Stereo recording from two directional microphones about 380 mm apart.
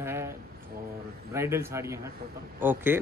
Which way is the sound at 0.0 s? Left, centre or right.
Centre.